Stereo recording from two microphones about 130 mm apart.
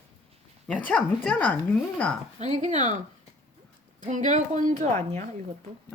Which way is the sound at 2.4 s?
65° right (ahead or behind).